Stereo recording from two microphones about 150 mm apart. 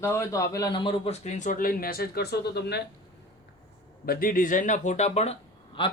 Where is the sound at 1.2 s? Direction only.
50° left (ahead or behind); by 2.8 s 90° left.